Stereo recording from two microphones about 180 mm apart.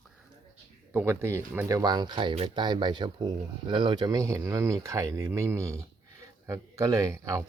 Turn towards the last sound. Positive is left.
turn(degrees=-15)  # may be behind; listen again after turning